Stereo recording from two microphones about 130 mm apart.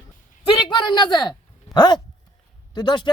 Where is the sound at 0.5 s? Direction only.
35° left (ahead or behind).